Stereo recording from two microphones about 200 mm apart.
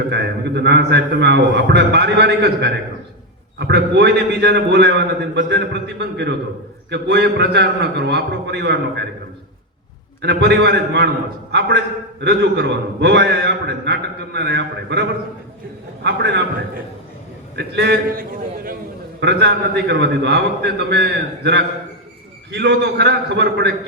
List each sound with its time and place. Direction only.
0.1 s a man's voice: 55° right (ahead or behind)
10.2 s a man's voice: 55° right (ahead or behind)
12.2 s a man's voice: 55° right (ahead or behind)
16.0 s a man's voice: 60° right (ahead or behind)
17.6 s a man's voice: 55° right (ahead or behind)
19.2 s a man's voice: 55° right (ahead or behind)